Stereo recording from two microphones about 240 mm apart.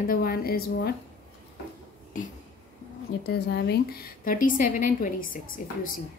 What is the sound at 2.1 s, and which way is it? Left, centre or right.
A woman's voice, left.